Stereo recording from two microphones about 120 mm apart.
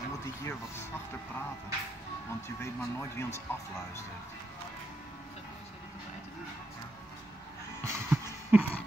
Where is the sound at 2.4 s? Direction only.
20° left (ahead or behind).